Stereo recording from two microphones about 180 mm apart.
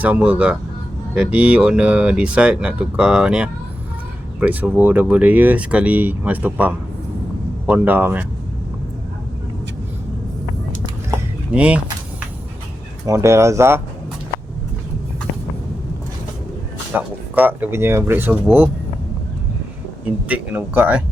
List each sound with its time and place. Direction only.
0.0 s speech: 10° right (ahead or behind)
11.1 s a sound: 10° right (ahead or behind)
13.1 s speech: 15° right (ahead or behind)
16.9 s speech: 10° right (ahead or behind)
20.2 s speech: 10° right (ahead or behind)